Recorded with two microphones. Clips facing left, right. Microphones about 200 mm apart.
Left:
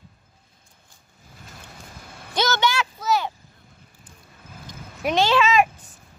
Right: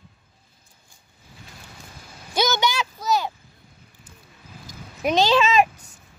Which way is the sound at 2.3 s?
15° right (ahead or behind).